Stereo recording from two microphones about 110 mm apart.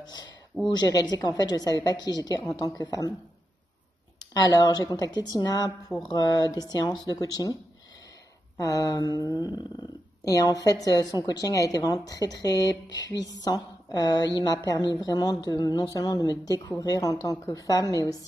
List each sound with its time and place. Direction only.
0.0 s speech: 40° left (ahead or behind)
4.2 s speech: 35° left (ahead or behind)
8.5 s speech: 30° left (ahead or behind)